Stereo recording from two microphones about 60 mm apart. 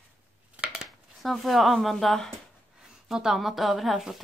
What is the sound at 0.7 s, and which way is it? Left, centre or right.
Dishes, centre.